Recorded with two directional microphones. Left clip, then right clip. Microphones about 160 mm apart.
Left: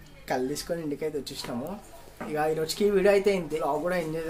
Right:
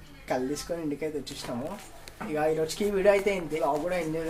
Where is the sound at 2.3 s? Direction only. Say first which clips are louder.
Even; 20° left (ahead or behind).